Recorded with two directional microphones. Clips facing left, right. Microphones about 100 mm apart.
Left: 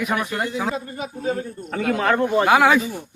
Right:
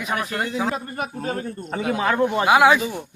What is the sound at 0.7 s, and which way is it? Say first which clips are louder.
Speech: right 1 dB; 60° right (ahead or behind).